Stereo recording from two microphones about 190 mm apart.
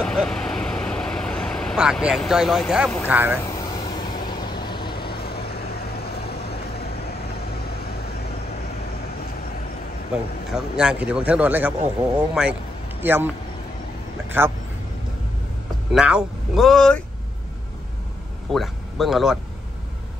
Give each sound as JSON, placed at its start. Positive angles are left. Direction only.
{"t": 0.0, "sound": "vehicle", "side_deg": 5}
{"t": 3.4, "sound": "vehicle", "side_deg": 20}
{"t": 5.2, "sound": "vehicle", "side_deg": 55}
{"t": 10.1, "sound": "speech", "side_deg": -5}
{"t": 14.4, "sound": "speech", "side_deg": -10}
{"t": 15.9, "sound": "speech", "side_deg": -5}
{"t": 18.5, "sound": "speech", "side_deg": 0}